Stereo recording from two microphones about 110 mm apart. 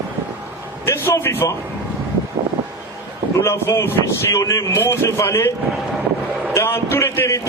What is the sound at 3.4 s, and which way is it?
Speech, 25° left (ahead or behind).